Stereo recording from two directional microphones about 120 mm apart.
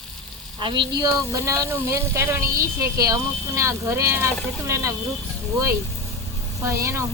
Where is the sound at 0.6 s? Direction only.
45° right (ahead or behind).